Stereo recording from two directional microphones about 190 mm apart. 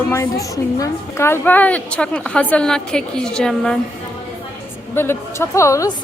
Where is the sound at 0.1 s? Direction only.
15° left (ahead or behind).